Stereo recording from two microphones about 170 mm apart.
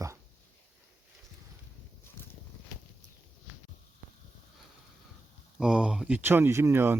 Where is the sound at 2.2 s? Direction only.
15° left (ahead or behind).